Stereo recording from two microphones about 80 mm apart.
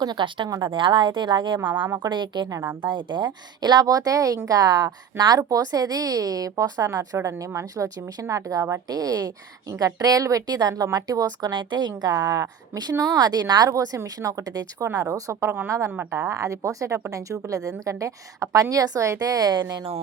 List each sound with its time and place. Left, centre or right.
0.0 s a woman's voice: right
1.6 s speech: right
2.0 s a woman's voice: right
15.9 s speech: right
16.2 s speech: right